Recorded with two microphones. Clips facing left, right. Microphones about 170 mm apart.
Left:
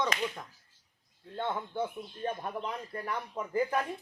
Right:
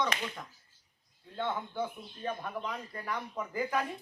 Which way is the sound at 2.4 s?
30° left (ahead or behind).